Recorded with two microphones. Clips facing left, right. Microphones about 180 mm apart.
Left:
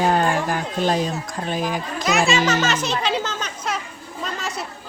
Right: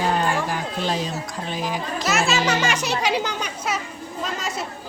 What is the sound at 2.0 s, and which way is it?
Speech, centre (ahead or behind).